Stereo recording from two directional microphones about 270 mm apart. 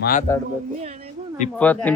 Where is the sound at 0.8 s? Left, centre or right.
Right.